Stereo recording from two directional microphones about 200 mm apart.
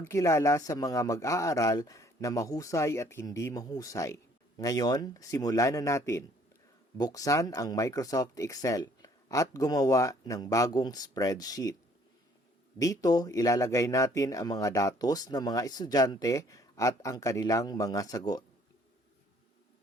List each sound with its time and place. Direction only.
0.0 s speech: 15° left (ahead or behind)
12.8 s speech: 15° left (ahead or behind)